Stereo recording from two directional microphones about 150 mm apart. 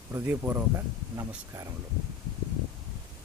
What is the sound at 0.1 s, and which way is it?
Speech, 15° right (ahead or behind).